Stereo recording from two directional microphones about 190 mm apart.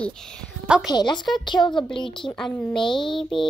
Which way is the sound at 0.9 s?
20° left (ahead or behind).